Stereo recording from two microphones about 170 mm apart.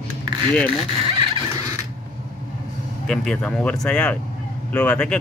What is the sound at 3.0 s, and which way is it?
Speech, 5° left (ahead or behind).